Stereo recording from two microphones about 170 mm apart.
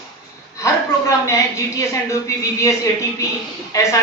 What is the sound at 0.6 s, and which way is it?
A woman's voice, 20° left (ahead or behind).